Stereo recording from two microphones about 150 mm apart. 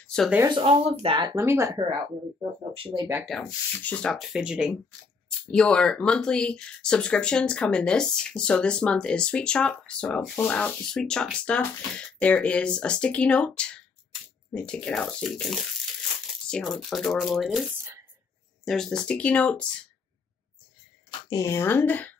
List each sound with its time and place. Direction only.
0.0 s a sound: 5° left (ahead or behind)
0.5 s speech: 40° right (ahead or behind)
1.3 s speech: 20° right (ahead or behind)
2.7 s speech: 35° right (ahead or behind)
3.3 s speech: 5° left (ahead or behind)
5.4 s speech: 5° left (ahead or behind)
21.1 s speech: 20° left (ahead or behind)